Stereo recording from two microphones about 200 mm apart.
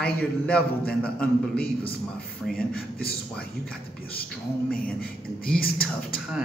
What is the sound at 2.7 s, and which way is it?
Speech, 50° left (ahead or behind).